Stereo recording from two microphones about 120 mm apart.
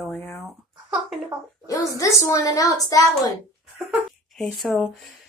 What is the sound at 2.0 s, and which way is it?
A woman's voice, 25° left (ahead or behind).